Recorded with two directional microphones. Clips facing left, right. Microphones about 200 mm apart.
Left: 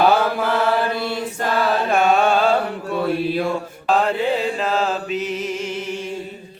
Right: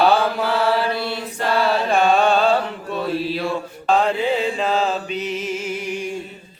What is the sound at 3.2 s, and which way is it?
Mantra, 50° left (ahead or behind).